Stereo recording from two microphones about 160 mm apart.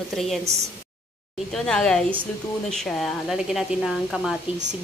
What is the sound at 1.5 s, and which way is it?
Speech, 5° left (ahead or behind).